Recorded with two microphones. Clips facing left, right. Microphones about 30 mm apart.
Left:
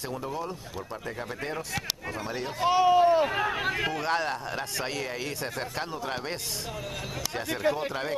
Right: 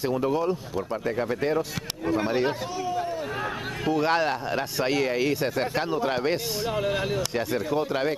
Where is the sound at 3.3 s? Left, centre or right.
Centre.